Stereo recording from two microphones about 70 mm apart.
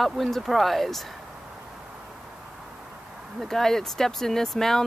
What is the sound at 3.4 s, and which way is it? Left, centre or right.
Speech, centre.